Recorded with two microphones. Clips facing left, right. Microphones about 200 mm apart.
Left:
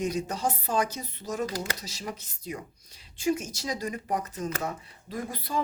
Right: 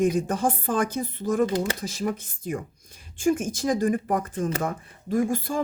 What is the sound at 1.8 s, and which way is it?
Speech, 50° right (ahead or behind).